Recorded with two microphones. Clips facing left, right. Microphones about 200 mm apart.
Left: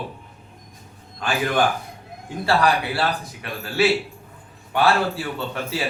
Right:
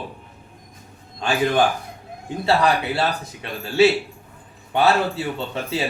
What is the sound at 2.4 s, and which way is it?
Speech, 20° right (ahead or behind).